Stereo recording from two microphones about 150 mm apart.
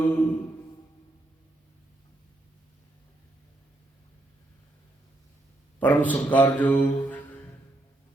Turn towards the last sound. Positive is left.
turn(degrees=10)  # may be behind; listen again after turning